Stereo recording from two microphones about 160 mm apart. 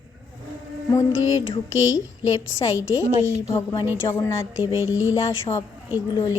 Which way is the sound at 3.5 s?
25° left (ahead or behind).